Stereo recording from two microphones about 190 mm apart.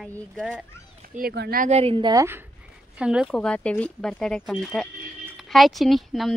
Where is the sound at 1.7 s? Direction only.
30° right (ahead or behind); by 2.4 s 15° right (ahead or behind).